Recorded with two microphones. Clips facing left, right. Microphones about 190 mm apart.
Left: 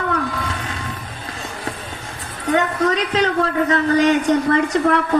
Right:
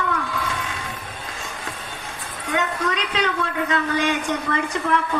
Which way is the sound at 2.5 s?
35° left (ahead or behind).